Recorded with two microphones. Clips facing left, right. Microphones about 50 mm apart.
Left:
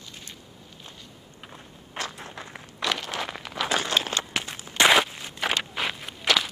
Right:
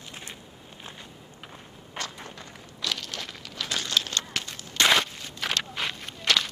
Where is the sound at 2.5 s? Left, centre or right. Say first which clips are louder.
Left 5 dB; left; by 6.4 s centre.